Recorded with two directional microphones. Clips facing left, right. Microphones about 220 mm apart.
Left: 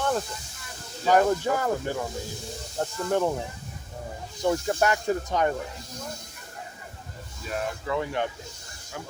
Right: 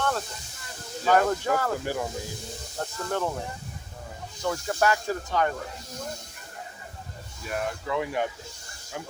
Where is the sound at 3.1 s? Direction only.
15° left (ahead or behind).